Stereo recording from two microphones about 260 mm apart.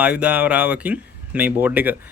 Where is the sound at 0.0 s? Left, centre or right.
Centre.